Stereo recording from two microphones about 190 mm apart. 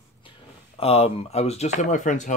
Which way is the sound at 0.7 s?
30° left (ahead or behind).